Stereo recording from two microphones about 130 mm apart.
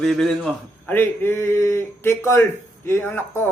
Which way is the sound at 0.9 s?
15° left (ahead or behind).